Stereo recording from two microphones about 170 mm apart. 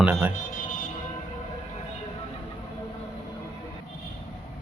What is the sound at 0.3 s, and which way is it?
Music, 50° left (ahead or behind).